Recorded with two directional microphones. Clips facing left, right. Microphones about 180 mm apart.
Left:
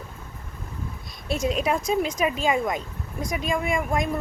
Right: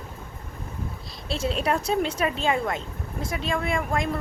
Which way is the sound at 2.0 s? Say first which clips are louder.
Left 1 dB; 10° left (ahead or behind).